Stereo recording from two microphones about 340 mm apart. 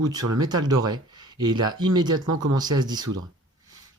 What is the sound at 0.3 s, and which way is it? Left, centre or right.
Speech, centre.